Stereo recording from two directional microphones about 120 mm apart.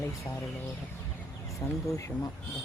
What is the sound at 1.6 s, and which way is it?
Speech, 35° left (ahead or behind).